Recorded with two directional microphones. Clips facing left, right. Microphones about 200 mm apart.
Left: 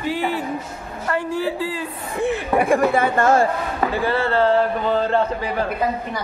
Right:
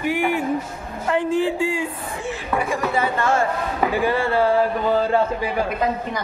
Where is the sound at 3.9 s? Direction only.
15° right (ahead or behind).